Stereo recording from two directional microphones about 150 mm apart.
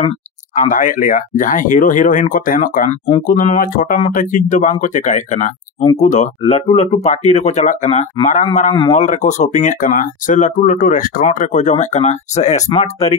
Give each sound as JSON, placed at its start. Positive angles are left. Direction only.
{"t": 0.0, "sound": "speech", "side_deg": 50}